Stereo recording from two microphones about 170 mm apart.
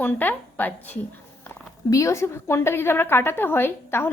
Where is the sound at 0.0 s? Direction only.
10° left (ahead or behind).